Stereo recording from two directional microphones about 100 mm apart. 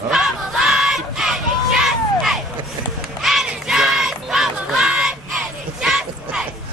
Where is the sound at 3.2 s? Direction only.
5° right (ahead or behind).